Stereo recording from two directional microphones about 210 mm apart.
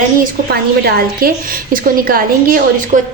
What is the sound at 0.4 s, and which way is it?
A woman's voice, 45° right (ahead or behind).